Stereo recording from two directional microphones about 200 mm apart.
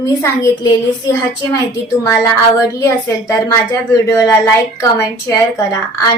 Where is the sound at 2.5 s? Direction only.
15° left (ahead or behind).